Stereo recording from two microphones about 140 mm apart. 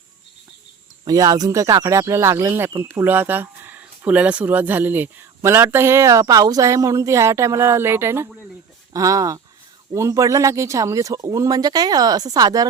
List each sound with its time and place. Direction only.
1.0 s speech: 25° right (ahead or behind)